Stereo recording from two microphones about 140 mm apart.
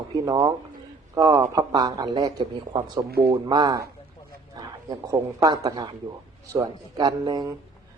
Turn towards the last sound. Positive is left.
turn(degrees=-30)  # may be behind; listen again after turning